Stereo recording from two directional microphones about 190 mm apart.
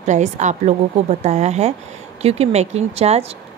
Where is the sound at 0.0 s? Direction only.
40° right (ahead or behind).